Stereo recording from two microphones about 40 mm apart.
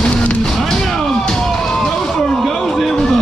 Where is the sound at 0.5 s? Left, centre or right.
Centre.